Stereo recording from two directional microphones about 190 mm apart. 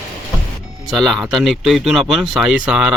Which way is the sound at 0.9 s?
Centre (ahead or behind).